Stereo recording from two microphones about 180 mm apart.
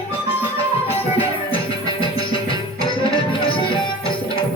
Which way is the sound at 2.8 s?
30° left (ahead or behind).